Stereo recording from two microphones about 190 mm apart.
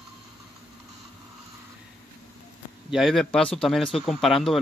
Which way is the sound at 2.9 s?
Centre (ahead or behind).